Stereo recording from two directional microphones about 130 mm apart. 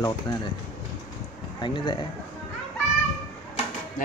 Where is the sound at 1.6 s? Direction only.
35° left (ahead or behind).